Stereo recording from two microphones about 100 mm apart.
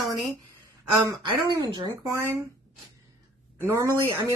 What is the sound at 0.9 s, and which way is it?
Speech, 45° right (ahead or behind).